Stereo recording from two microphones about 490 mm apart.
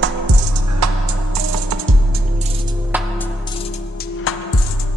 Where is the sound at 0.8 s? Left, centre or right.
Right.